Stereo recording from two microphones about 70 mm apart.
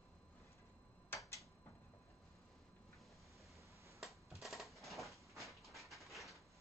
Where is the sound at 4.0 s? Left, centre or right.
Centre.